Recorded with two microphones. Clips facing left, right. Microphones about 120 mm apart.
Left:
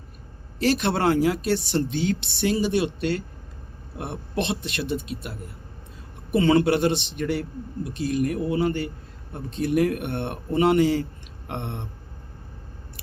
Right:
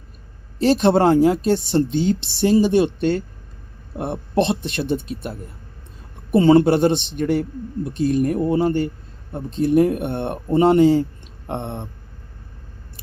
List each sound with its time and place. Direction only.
0.6 s speech: 35° right (ahead or behind)
6.3 s speech: 35° right (ahead or behind)